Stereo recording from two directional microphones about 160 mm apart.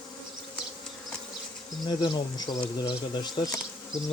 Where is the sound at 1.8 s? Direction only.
25° left (ahead or behind).